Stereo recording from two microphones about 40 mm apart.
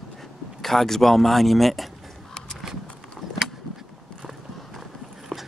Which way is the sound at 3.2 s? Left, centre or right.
Centre.